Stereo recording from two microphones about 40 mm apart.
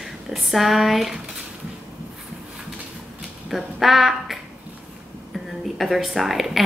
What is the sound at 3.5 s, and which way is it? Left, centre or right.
Speech, centre.